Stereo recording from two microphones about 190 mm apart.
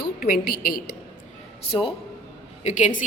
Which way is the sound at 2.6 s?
40° left (ahead or behind).